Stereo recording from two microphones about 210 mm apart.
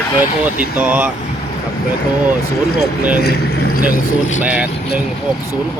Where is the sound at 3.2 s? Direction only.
50° left (ahead or behind).